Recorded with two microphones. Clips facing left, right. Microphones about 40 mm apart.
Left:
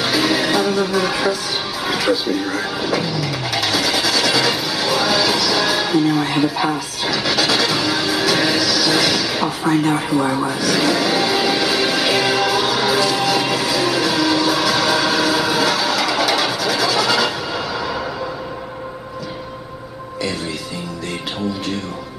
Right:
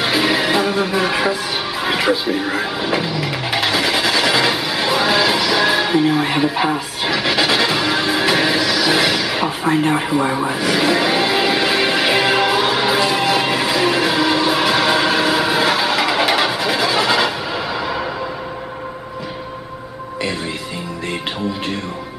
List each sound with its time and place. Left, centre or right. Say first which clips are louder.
0.0 s music: right 1 dB; right
1.9 s vehicle: right 1 dB; right